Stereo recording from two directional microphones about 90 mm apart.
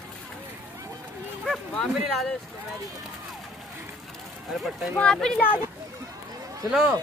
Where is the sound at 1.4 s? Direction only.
Centre (ahead or behind).